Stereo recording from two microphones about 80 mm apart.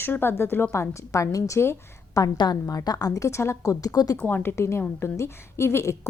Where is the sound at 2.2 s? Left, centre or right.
Left.